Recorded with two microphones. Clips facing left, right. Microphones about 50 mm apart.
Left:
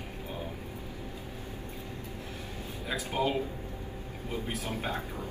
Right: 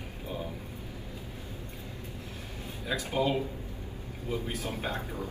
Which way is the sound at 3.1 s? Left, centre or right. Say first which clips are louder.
Right 1 dB; left.